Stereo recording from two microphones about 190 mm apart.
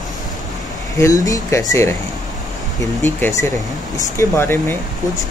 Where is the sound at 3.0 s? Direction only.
15° left (ahead or behind).